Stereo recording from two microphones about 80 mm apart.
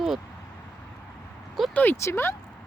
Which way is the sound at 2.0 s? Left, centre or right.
Left.